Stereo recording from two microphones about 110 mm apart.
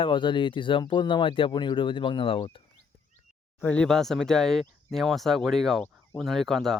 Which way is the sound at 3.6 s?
10° left (ahead or behind).